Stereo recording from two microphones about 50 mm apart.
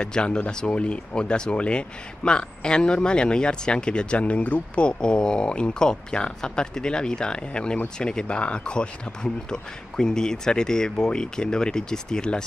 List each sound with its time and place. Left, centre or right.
0.0 s speech: centre